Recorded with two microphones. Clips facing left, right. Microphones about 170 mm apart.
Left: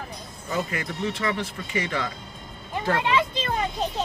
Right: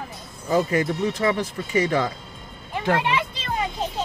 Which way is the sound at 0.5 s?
40° right (ahead or behind).